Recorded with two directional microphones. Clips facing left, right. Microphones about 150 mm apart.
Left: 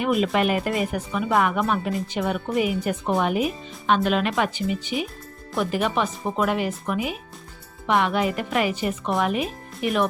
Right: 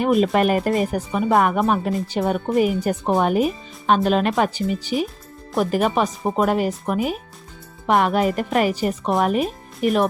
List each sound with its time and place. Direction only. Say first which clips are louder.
0.0 s speech: right 4 dB; 40° right (ahead or behind)